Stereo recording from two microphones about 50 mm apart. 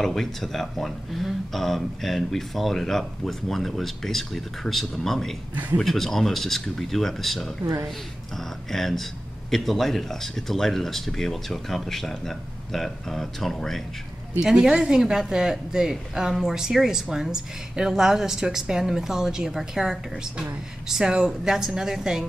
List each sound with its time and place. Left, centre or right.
0.0 s speech: centre
5.5 s speech: right
5.8 s speech: centre
14.4 s a woman's voice: centre